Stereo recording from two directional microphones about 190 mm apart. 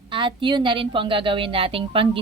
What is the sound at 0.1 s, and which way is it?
A woman's voice, 25° right (ahead or behind).